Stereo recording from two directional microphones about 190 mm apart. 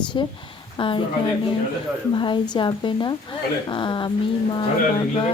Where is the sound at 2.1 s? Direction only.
25° left (ahead or behind).